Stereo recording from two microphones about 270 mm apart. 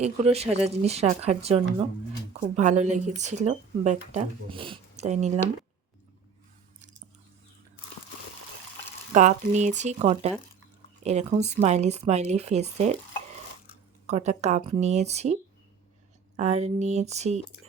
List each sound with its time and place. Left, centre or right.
0.0 s speech: right
9.1 s speech: right
14.1 s speech: right
16.4 s speech: right